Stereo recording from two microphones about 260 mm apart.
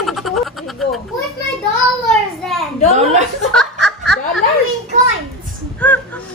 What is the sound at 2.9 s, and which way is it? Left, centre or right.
Chuckle, right.